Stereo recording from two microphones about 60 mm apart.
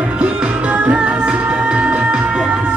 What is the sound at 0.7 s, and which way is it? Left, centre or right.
Music, right.